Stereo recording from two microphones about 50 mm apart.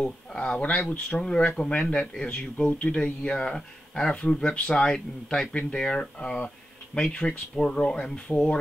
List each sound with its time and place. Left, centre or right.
0.0 s speech: centre
5.5 s speech: left